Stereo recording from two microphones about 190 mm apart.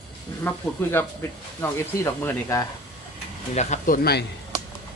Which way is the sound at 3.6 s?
40° left (ahead or behind).